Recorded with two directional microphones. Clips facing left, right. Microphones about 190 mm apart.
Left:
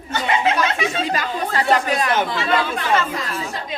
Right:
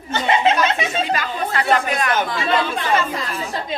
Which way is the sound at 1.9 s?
30° left (ahead or behind).